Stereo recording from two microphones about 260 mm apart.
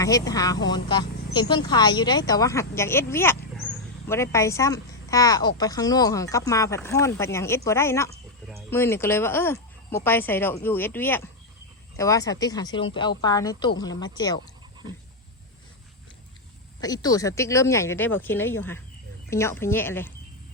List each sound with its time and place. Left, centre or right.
0.0 s speech: centre
16.8 s speech: centre